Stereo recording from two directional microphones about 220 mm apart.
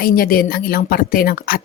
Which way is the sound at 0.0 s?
40° left (ahead or behind).